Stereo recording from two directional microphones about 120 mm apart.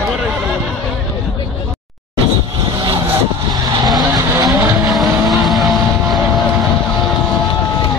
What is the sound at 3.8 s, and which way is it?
Vehicle, 35° right (ahead or behind).